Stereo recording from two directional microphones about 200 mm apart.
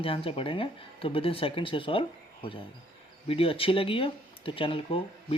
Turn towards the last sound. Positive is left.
turn(degrees=25)  # may be behind; listen again after turning